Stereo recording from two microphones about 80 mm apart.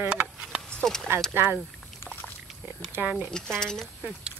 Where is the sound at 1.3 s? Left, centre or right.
Right.